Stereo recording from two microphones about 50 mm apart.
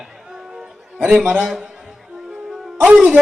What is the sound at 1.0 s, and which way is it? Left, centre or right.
Speech, centre.